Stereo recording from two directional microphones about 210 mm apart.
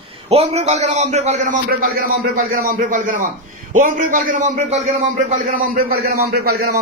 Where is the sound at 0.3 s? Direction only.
30° right (ahead or behind).